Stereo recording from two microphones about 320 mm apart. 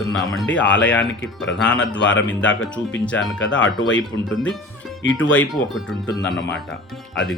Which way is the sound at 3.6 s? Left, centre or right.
Left.